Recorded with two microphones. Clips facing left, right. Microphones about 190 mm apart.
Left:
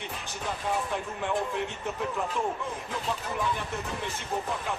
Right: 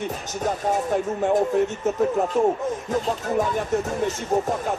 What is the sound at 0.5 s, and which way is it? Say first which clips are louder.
Speech: right 8 dB; 45° right (ahead or behind).